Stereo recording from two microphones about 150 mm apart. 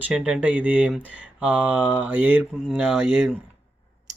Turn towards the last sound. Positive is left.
turn(degrees=5)  # may be behind; listen again after turning